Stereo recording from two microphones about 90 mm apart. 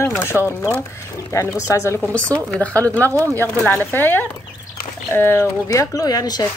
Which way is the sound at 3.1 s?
35° right (ahead or behind).